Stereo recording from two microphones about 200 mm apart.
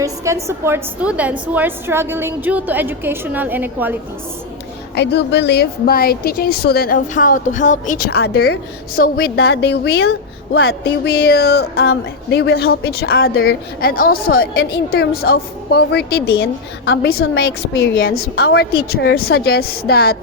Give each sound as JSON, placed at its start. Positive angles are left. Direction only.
{"t": 0.0, "sound": "a woman's voice", "side_deg": -15}
{"t": 4.9, "sound": "speech", "side_deg": 55}
{"t": 10.5, "sound": "speech", "side_deg": 90}
{"t": 18.2, "sound": "speech", "side_deg": 55}